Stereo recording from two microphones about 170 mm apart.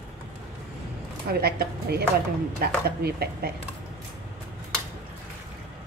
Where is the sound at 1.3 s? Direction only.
65° right (ahead or behind).